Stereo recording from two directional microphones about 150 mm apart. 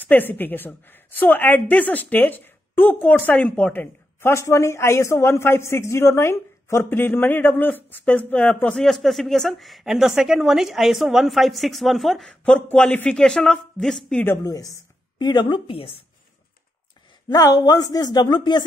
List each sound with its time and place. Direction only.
0.0 s a woman's voice: 10° left (ahead or behind)
14.2 s a woman's voice: 20° left (ahead or behind); by 15.9 s 35° left (ahead or behind)
17.3 s speech: 25° left (ahead or behind)